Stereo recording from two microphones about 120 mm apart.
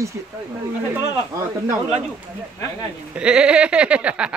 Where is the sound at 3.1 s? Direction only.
10° right (ahead or behind).